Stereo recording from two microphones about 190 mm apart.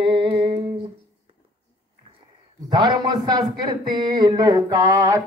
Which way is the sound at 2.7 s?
25° right (ahead or behind).